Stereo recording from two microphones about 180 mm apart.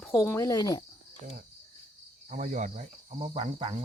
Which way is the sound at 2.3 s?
45° right (ahead or behind).